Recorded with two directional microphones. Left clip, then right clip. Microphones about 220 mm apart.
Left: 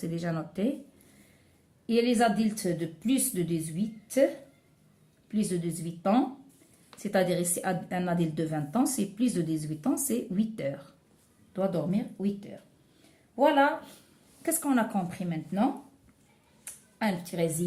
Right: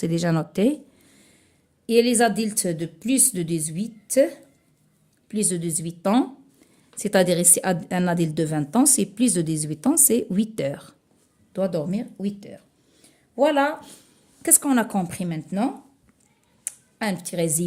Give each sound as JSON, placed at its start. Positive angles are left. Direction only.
{"t": 0.0, "sound": "a woman's voice", "side_deg": -55}
{"t": 1.9, "sound": "a woman's voice", "side_deg": -50}
{"t": 5.3, "sound": "a woman's voice", "side_deg": -50}
{"t": 16.6, "sound": "a sound", "side_deg": -50}